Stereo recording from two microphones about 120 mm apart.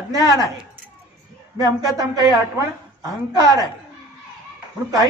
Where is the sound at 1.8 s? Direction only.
35° right (ahead or behind).